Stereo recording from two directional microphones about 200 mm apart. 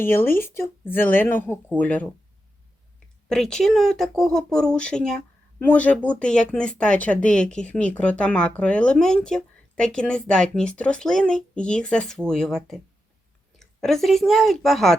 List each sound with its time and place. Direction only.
0.0 s speech: 10° left (ahead or behind)
3.2 s speech: centre (ahead or behind)